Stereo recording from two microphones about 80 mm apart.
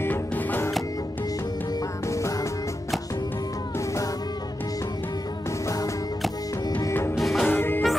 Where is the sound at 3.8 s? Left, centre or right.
Left.